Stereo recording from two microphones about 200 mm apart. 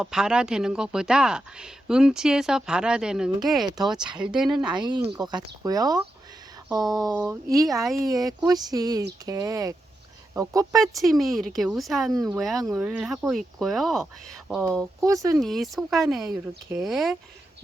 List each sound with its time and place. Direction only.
0.0 s speech: 5° right (ahead or behind)
4.4 s speech: 20° right (ahead or behind)
10.9 s speech: centre (ahead or behind)
15.0 s speech: 15° right (ahead or behind)
15.4 s speech: centre (ahead or behind)